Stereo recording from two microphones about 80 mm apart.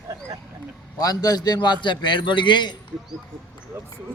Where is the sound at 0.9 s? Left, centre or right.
Left.